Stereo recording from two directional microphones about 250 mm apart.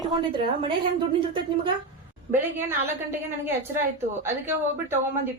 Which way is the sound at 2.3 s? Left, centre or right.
Centre.